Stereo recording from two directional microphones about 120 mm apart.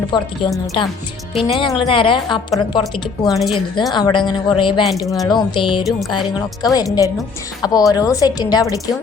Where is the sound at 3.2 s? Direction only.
Centre (ahead or behind).